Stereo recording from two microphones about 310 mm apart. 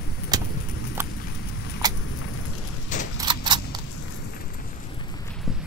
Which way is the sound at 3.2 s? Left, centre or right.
Centre.